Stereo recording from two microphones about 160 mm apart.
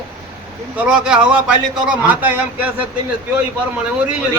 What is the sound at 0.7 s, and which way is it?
A man's voice, 5° right (ahead or behind).